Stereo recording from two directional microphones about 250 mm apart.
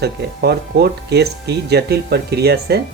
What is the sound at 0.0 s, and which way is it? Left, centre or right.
Speech, right.